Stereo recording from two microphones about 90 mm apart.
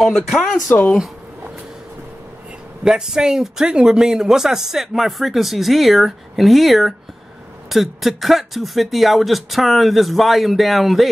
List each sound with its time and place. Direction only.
0.0 s speech: centre (ahead or behind)
2.8 s speech: 5° right (ahead or behind)